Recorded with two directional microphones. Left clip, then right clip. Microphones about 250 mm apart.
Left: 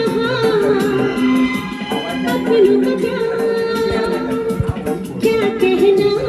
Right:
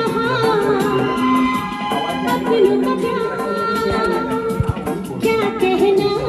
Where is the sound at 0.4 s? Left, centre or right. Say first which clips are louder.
Left 2 dB; centre.